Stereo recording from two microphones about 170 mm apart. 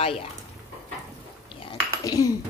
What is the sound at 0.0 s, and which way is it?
Speech, 35° left (ahead or behind).